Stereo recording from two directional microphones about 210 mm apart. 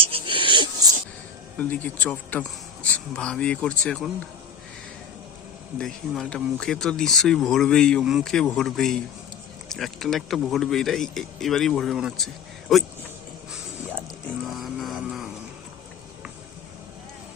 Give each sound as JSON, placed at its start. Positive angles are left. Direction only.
{"t": 0.0, "sound": "wheeze", "side_deg": -25}
{"t": 1.5, "sound": "speech", "side_deg": 10}
{"t": 5.7, "sound": "speech", "side_deg": 5}
{"t": 14.4, "sound": "vehicle", "side_deg": 0}